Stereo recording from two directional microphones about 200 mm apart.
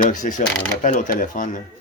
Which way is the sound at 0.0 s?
40° left (ahead or behind).